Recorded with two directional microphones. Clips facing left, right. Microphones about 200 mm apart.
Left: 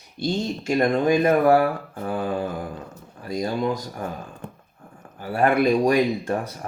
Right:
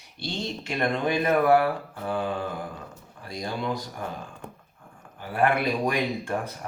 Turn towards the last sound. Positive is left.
turn(degrees=40)  # may be behind; listen again after turning